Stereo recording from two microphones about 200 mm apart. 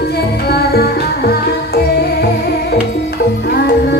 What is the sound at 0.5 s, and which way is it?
Music, 50° left (ahead or behind).